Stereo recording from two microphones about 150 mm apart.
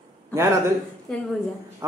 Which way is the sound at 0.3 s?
20° right (ahead or behind).